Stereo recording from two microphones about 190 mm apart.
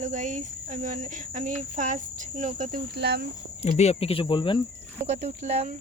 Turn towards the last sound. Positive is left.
turn(degrees=-35)  # may be behind; listen again after turning